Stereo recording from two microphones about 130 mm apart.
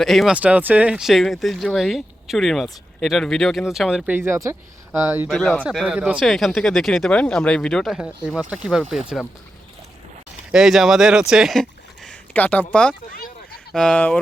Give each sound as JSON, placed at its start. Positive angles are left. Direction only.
{"t": 0.0, "sound": "speech", "side_deg": 0}
{"t": 0.3, "sound": "speech", "side_deg": -10}
{"t": 5.3, "sound": "speech", "side_deg": 0}
{"t": 6.2, "sound": "speech", "side_deg": 0}
{"t": 10.5, "sound": "speech", "side_deg": -5}
{"t": 12.0, "sound": "speech", "side_deg": 10}